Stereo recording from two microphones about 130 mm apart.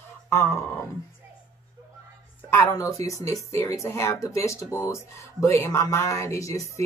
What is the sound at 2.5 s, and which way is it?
Speech, 25° left (ahead or behind).